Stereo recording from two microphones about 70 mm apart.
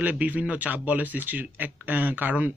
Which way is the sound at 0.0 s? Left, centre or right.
Right.